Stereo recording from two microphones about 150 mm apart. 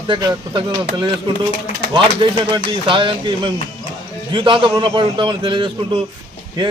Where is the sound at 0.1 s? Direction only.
30° right (ahead or behind).